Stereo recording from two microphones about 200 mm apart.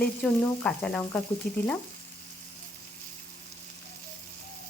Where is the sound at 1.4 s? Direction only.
45° left (ahead or behind).